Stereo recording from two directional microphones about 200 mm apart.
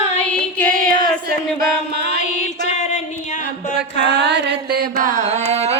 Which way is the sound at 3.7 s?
60° right (ahead or behind).